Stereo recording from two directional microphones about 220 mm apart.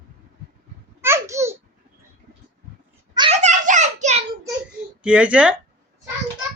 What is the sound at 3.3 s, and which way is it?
Child singing, 35° right (ahead or behind).